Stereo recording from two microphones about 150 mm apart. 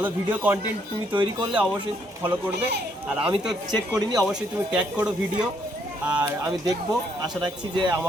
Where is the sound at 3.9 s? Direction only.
25° right (ahead or behind).